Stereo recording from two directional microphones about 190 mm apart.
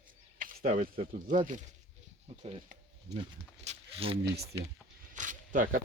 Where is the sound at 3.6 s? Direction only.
30° right (ahead or behind).